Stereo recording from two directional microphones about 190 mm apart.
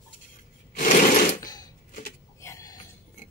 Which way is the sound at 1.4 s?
20° left (ahead or behind).